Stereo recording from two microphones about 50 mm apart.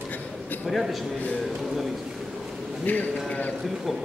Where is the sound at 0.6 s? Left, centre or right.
Centre.